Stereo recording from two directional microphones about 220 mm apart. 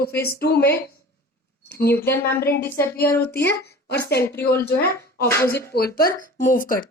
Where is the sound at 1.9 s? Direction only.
10° left (ahead or behind).